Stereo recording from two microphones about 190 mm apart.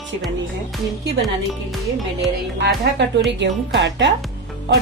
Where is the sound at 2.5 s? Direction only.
65° right (ahead or behind).